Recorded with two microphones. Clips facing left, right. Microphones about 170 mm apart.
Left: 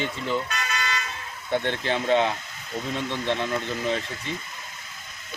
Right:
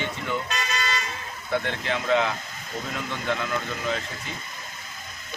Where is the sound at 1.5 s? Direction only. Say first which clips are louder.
Left 2 dB; 30° left (ahead or behind).